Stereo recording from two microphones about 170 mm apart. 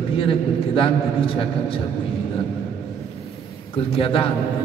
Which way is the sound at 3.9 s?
30° left (ahead or behind).